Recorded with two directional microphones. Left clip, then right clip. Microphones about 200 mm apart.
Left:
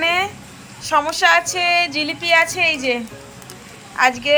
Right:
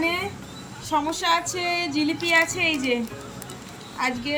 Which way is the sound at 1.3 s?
35° left (ahead or behind).